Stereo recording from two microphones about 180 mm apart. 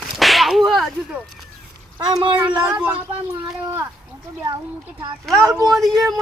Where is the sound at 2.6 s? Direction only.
10° right (ahead or behind).